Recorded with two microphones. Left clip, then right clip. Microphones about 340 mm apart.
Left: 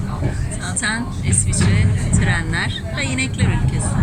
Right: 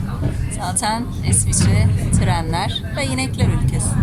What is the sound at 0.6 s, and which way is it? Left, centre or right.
A woman's voice, centre.